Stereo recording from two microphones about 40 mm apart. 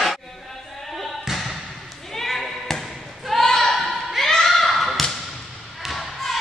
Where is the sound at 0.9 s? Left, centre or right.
Centre.